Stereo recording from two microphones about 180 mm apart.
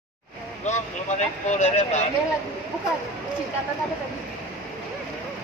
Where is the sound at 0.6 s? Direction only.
40° left (ahead or behind).